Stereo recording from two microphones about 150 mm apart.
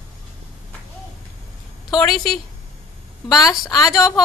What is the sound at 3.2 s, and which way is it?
Speech, 25° left (ahead or behind).